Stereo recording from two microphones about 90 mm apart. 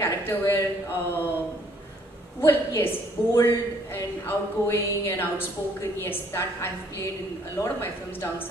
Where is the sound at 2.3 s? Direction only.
25° left (ahead or behind).